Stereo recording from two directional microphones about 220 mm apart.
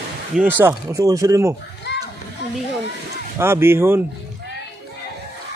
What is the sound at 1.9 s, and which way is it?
Children playing, 50° left (ahead or behind).